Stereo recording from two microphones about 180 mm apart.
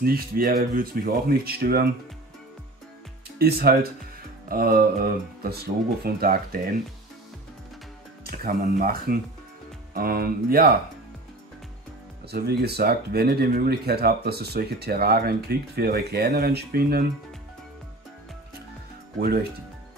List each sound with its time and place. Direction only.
0.0 s speech: 55° right (ahead or behind)
3.3 s speech: 60° right (ahead or behind)
8.2 s speech: 55° right (ahead or behind)
12.3 s speech: 65° right (ahead or behind)
19.1 s speech: 60° right (ahead or behind)